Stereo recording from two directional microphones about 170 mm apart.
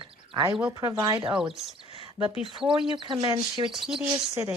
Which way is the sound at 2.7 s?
30° right (ahead or behind).